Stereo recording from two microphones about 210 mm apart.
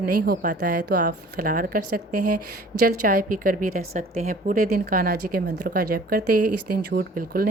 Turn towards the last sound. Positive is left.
turn(degrees=-45)  # may be behind; listen again after turning